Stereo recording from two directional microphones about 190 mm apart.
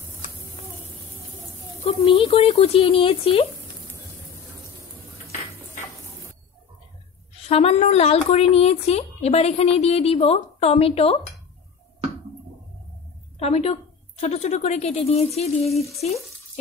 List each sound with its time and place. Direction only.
1.8 s speech: 30° left (ahead or behind)
7.4 s speech: 30° left (ahead or behind)
13.4 s a woman's voice: 35° left (ahead or behind)